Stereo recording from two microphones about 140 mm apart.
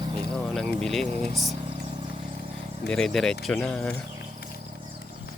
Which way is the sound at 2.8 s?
5° left (ahead or behind).